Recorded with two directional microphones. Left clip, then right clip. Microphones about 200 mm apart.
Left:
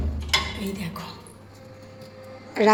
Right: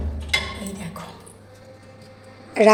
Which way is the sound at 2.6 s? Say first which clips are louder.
Right 5 dB; 15° right (ahead or behind).